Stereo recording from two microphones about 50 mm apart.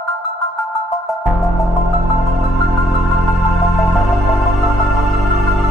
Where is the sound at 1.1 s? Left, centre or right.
Centre.